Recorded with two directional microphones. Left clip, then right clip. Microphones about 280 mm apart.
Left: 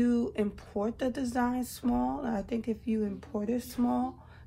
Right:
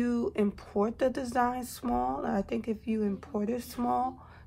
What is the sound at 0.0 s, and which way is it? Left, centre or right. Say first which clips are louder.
Speech: even; right.